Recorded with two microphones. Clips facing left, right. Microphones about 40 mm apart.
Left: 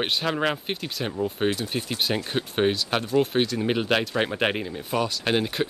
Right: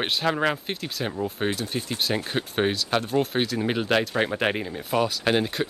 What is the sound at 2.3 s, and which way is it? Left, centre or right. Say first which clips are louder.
Speech: left 1 dB; centre.